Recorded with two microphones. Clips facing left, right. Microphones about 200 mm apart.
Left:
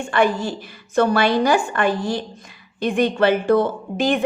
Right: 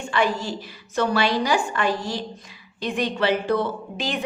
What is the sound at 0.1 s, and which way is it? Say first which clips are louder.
A woman's voice: left 4 dB; 55° left (ahead or behind).